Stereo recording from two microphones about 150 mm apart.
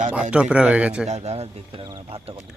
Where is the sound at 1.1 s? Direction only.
45° right (ahead or behind).